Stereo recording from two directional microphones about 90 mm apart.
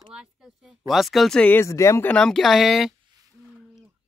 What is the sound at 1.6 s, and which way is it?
Speech, 35° left (ahead or behind).